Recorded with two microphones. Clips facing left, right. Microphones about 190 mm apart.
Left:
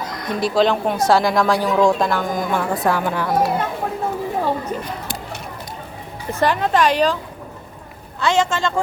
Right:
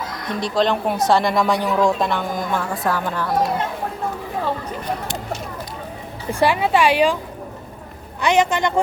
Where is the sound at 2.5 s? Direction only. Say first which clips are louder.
Left 4 dB; 15° left (ahead or behind).